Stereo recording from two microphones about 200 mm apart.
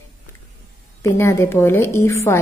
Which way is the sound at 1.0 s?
15° left (ahead or behind).